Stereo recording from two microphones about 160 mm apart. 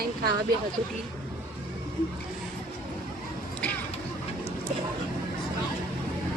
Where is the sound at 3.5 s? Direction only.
10° left (ahead or behind).